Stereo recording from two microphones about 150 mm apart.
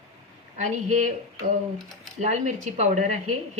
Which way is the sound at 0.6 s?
50° right (ahead or behind).